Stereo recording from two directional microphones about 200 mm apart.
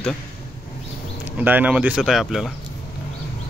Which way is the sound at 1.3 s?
10° right (ahead or behind).